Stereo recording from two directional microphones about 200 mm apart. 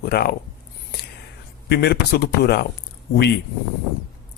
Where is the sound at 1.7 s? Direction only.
55° left (ahead or behind).